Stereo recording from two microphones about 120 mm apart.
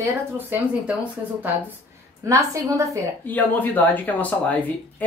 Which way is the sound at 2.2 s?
25° right (ahead or behind).